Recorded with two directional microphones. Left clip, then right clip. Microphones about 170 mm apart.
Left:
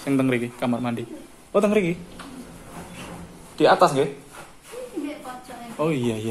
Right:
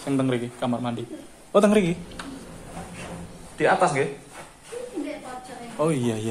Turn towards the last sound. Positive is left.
turn(degrees=5)  # may be behind; listen again after turning